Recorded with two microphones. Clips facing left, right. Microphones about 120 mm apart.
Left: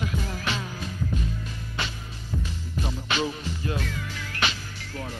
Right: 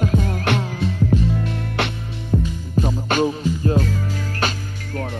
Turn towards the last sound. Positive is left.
turn(degrees=-45)  # may be behind; listen again after turning